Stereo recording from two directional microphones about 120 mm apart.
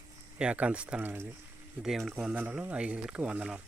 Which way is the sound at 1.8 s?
Centre (ahead or behind).